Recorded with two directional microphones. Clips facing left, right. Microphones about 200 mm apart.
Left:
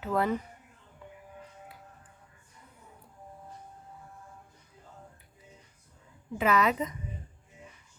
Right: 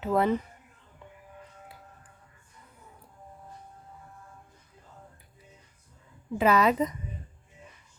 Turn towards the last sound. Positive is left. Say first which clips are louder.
# right 3 dB
turn(degrees=-35)  # may be behind; listen again after turning